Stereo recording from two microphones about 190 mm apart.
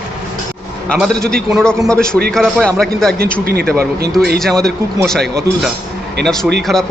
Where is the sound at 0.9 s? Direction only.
5° left (ahead or behind).